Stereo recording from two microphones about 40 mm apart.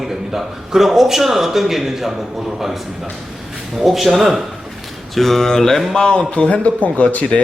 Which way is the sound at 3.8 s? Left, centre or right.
Centre.